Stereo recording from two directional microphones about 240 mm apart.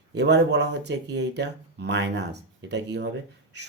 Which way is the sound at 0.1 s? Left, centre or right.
Right.